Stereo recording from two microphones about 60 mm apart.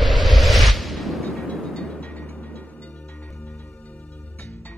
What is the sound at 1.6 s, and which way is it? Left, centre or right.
Music, centre.